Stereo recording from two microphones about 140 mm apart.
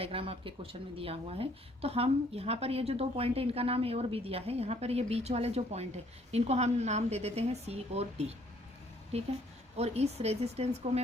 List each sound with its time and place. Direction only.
0.0 s a woman's voice: 45° right (ahead or behind)